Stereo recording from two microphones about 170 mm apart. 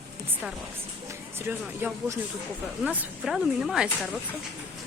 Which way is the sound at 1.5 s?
10° right (ahead or behind).